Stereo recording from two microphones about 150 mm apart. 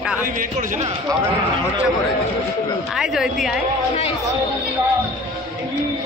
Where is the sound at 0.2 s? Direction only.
65° right (ahead or behind).